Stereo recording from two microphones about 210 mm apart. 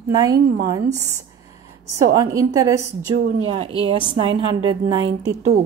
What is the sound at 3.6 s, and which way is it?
Speech, 25° right (ahead or behind).